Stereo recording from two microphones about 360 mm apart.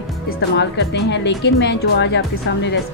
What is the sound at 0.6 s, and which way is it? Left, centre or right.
Speech, left.